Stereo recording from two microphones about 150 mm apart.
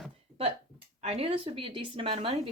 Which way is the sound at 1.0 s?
45° right (ahead or behind).